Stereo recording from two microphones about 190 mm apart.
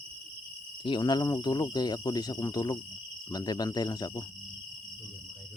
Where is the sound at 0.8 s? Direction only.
25° left (ahead or behind).